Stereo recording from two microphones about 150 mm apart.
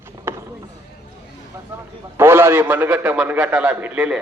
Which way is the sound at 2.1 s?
15° right (ahead or behind).